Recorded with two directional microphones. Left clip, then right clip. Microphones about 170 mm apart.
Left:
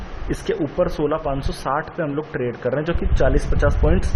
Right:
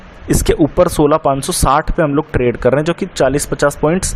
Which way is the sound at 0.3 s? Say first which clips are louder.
Right 10 dB; 30° right (ahead or behind).